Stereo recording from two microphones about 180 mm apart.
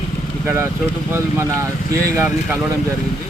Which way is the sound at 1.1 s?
15° right (ahead or behind).